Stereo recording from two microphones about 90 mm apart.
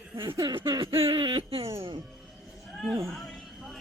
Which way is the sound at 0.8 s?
90° right.